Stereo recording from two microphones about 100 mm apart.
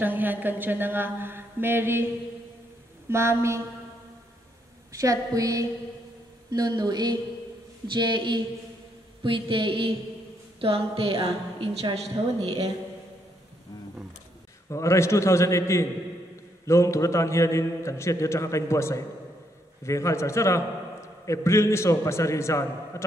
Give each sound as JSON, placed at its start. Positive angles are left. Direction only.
{"t": 0.0, "sound": "speech", "side_deg": -20}
{"t": 3.1, "sound": "speech", "side_deg": -25}
{"t": 4.9, "sound": "a woman's voice", "side_deg": -35}
{"t": 9.2, "sound": "a sound", "side_deg": -55}
{"t": 10.6, "sound": "a woman's voice", "side_deg": -70}
{"t": 14.7, "sound": "a man's voice", "side_deg": 30}